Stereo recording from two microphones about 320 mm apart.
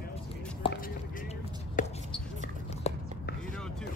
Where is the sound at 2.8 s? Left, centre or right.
Centre.